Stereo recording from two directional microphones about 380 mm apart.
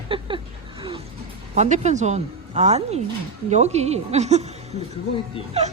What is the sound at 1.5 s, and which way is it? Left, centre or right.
Speech, centre.